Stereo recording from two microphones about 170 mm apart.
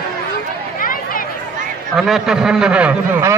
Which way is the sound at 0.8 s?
55° left (ahead or behind).